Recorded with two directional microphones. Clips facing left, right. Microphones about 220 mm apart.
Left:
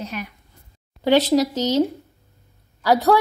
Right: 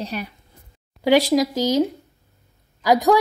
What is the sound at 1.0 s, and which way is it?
A woman's voice, 10° right (ahead or behind).